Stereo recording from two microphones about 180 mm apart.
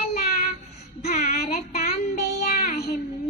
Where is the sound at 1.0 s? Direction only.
40° left (ahead or behind).